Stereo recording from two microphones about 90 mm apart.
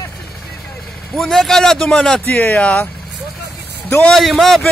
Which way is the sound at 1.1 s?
5° left (ahead or behind).